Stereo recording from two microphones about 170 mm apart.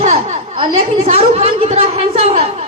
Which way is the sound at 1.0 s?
40° right (ahead or behind).